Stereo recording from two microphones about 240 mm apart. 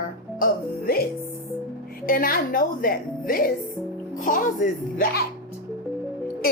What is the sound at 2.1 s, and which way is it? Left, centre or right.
Speech, left.